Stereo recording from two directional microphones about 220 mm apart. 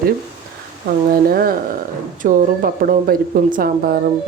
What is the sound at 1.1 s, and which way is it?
Speech, 40° right (ahead or behind).